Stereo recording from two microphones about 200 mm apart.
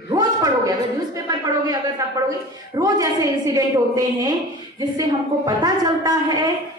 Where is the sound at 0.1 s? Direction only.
15° right (ahead or behind).